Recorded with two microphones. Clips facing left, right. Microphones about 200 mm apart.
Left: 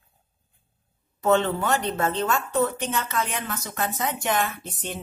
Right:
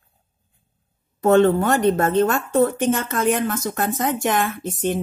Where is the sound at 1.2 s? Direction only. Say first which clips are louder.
Right 7 dB; 50° right (ahead or behind).